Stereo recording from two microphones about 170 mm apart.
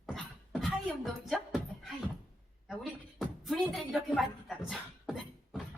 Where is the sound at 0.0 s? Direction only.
Centre (ahead or behind).